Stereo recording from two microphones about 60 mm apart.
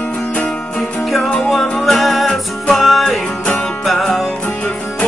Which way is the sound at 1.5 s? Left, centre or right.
Centre.